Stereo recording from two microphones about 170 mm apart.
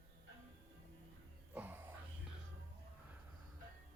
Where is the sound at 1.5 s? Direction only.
10° right (ahead or behind).